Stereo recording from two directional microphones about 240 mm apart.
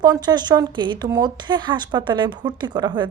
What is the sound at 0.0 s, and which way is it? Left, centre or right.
Speech, centre.